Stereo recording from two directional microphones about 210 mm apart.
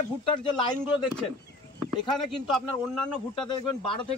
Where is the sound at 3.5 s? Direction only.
20° left (ahead or behind).